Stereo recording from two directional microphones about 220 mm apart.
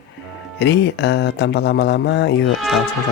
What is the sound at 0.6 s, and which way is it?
Speech, 50° left (ahead or behind).